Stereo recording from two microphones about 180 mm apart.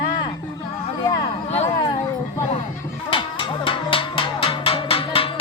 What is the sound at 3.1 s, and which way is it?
Music, 30° left (ahead or behind).